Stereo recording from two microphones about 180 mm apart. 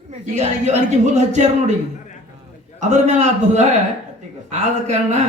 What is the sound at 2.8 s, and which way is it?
A man's voice, 40° right (ahead or behind).